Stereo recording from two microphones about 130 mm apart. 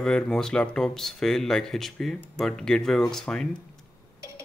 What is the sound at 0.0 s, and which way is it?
Speech, 5° left (ahead or behind).